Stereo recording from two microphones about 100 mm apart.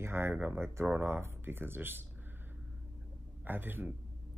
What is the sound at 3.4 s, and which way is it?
Speech, 20° right (ahead or behind).